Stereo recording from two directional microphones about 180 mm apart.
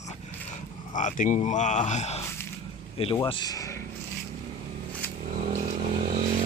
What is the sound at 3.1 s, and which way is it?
Speech, 25° left (ahead or behind).